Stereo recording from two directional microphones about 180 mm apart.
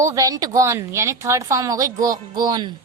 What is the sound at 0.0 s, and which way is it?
A woman's voice, 20° right (ahead or behind).